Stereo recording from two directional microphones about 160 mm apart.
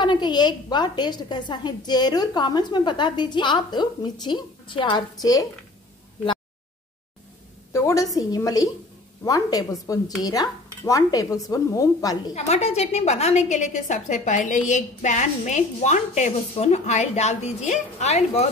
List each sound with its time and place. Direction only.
0.0 s a woman's voice: 30° left (ahead or behind)
7.7 s a woman's voice: 20° left (ahead or behind)
12.4 s a woman's voice: 40° left (ahead or behind)